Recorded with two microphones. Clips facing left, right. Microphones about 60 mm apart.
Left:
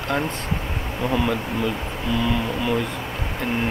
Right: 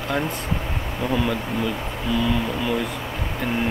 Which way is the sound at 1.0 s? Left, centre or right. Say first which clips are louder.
Left 1 dB; centre.